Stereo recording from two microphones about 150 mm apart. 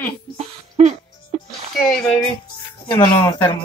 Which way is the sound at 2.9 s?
30° left (ahead or behind).